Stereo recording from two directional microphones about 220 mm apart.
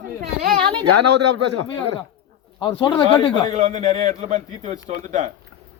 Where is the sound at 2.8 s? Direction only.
15° left (ahead or behind).